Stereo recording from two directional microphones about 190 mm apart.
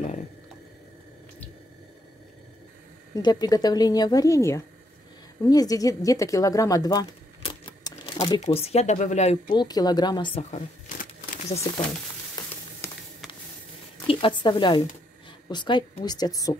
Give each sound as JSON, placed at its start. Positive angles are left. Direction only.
{"t": 3.2, "sound": "a woman's voice", "side_deg": 20}
{"t": 8.4, "sound": "speech", "side_deg": 35}
{"t": 9.5, "sound": "a woman's voice", "side_deg": 20}
{"t": 10.5, "sound": "crumpling", "side_deg": 35}
{"t": 14.0, "sound": "a woman's voice", "side_deg": 25}